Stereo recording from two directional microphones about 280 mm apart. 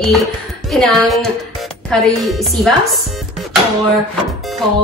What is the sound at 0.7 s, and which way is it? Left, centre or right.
A woman's voice, centre.